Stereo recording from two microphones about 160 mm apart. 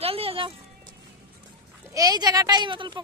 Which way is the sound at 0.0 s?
40° right (ahead or behind).